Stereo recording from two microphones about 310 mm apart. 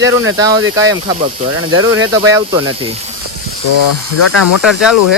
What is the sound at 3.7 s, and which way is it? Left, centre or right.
Speech, left.